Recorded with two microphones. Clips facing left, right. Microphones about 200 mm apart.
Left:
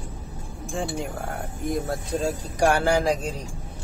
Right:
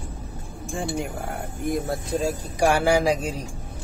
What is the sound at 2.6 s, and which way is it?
Speech, 10° right (ahead or behind).